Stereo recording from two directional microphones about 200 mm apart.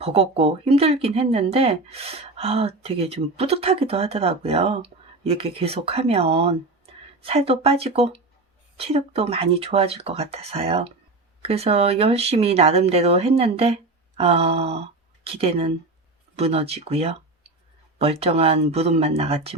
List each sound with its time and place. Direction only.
0.0 s speech: 30° right (ahead or behind)